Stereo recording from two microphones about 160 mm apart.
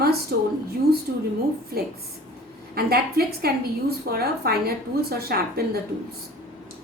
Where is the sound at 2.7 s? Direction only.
75° right (ahead or behind).